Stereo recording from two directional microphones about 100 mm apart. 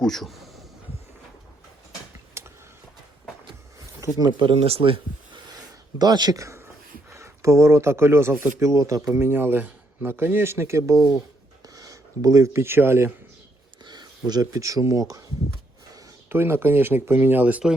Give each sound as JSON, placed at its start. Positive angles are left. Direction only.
{"t": 0.0, "sound": "a sound", "side_deg": 0}
{"t": 2.4, "sound": "a sound", "side_deg": -25}
{"t": 4.2, "sound": "speech", "side_deg": -50}
{"t": 4.5, "sound": "speech", "side_deg": -75}
{"t": 6.0, "sound": "a man's voice", "side_deg": -45}
{"t": 13.8, "sound": "speech", "side_deg": -45}
{"t": 16.3, "sound": "speech", "side_deg": -25}